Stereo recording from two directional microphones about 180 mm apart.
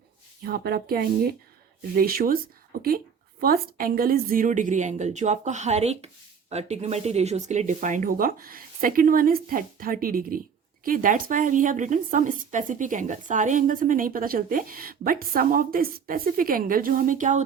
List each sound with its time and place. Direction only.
0.4 s a woman's voice: 60° right (ahead or behind)
3.4 s a woman's voice: 55° right (ahead or behind)